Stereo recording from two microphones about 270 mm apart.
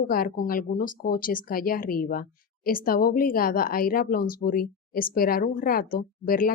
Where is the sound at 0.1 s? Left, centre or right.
Left.